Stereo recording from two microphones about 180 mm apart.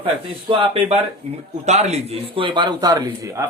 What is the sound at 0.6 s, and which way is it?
A man's voice, 30° right (ahead or behind).